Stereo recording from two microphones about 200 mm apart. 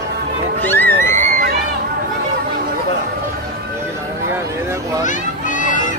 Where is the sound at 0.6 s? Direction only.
10° left (ahead or behind).